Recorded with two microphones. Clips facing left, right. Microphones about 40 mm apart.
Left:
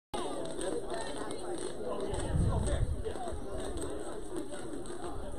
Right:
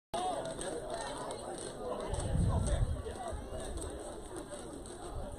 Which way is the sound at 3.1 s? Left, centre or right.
Left.